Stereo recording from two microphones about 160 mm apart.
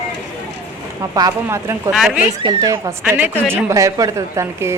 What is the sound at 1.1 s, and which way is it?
Speech, 20° right (ahead or behind).